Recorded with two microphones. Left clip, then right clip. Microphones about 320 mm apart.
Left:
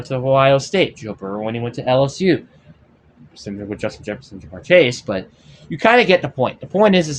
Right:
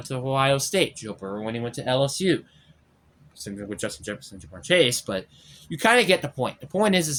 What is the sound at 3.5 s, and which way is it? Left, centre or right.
Speech, right.